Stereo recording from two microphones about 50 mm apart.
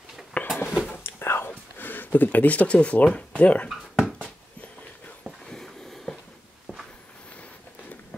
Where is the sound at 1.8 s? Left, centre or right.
Left.